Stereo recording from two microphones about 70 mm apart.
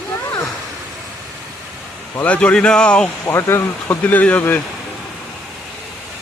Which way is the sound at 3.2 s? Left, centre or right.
Left.